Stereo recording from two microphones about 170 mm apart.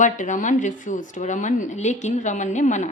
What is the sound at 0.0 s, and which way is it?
A woman's voice, 45° left (ahead or behind).